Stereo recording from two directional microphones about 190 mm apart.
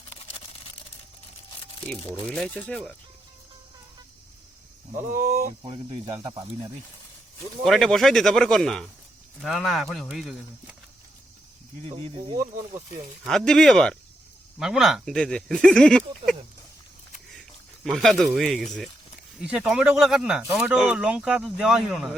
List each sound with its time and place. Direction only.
0.1 s a sound: 30° left (ahead or behind)
2.2 s speech: 5° left (ahead or behind)
5.1 s speech: 50° right (ahead or behind)
5.6 s speech: 25° right (ahead or behind)
7.6 s speech: centre (ahead or behind)
11.9 s speech: 30° right (ahead or behind)
13.2 s speech: 5° left (ahead or behind)
17.8 s speech: centre (ahead or behind)